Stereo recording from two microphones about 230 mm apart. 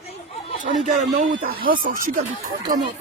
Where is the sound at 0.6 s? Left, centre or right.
Right.